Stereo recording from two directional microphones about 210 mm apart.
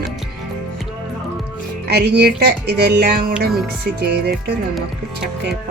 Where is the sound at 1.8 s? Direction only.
50° right (ahead or behind).